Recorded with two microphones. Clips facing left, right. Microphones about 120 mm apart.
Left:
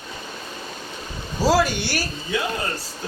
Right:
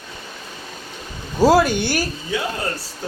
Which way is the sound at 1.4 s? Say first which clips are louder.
Right 5 dB; 50° right (ahead or behind).